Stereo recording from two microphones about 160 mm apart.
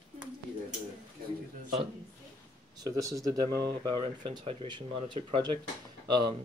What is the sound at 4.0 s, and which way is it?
Speech, 35° right (ahead or behind).